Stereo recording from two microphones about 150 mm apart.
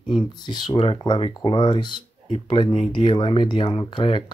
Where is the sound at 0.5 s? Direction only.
35° left (ahead or behind).